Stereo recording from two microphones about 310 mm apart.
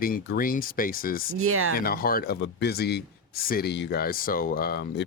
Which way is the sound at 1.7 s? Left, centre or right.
Left.